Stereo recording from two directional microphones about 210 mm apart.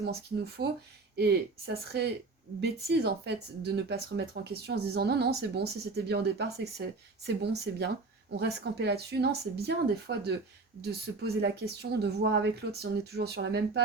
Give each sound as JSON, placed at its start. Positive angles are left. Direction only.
{"t": 0.0, "sound": "speech", "side_deg": -50}